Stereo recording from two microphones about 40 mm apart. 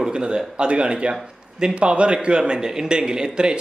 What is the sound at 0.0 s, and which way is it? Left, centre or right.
Speech, right.